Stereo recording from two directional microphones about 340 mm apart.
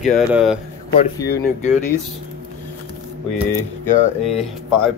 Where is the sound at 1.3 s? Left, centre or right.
Left.